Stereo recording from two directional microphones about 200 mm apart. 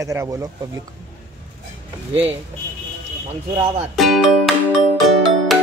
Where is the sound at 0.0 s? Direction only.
15° right (ahead or behind).